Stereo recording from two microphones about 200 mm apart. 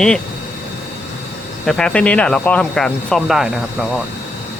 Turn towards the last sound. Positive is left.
turn(degrees=0)  # may be behind; listen again after turning